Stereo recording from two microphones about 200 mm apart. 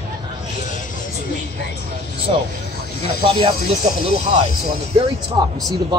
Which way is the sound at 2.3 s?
30° right (ahead or behind).